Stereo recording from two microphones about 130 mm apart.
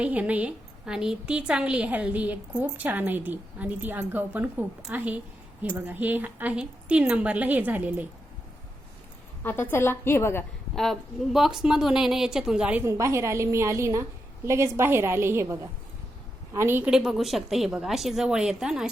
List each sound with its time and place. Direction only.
0.0 s a woman's voice: 10° right (ahead or behind)
9.4 s a woman's voice: 15° left (ahead or behind)
10.8 s speech: centre (ahead or behind)
12.8 s a woman's voice: 20° right (ahead or behind)
16.9 s speech: 5° right (ahead or behind)